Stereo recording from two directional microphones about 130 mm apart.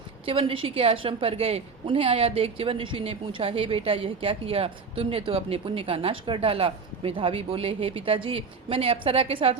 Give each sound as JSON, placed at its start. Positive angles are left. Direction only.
{"t": 0.3, "sound": "a woman's voice", "side_deg": -45}